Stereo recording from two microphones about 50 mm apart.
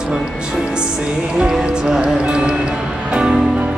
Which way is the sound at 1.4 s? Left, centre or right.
Centre.